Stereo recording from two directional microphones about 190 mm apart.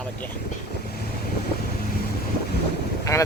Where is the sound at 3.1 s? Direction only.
15° left (ahead or behind).